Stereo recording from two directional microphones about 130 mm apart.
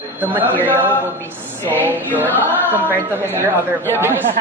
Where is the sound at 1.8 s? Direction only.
15° right (ahead or behind).